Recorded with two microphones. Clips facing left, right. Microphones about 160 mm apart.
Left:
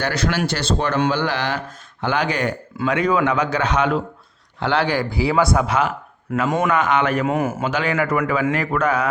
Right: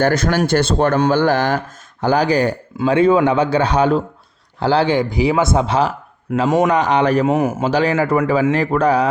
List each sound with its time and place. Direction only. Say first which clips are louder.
0.0 s a man's voice: right 6 dB; 50° right (ahead or behind)
7.3 s speech: right 4 dB; 20° right (ahead or behind)
7.6 s a man's voice: right 5 dB; 35° right (ahead or behind)